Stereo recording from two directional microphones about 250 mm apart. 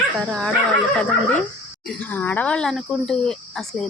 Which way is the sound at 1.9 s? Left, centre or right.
Centre.